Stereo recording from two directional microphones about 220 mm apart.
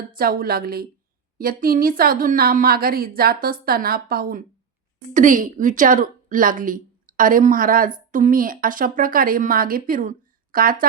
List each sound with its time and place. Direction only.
0.1 s a woman's voice: 40° right (ahead or behind)